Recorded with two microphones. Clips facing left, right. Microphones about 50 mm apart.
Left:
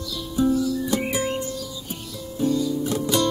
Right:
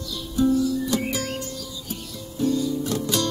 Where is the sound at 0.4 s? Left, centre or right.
Centre.